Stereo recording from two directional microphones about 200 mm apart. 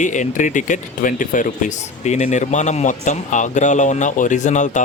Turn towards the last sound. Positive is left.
turn(degrees=40)  # may be behind; listen again after turning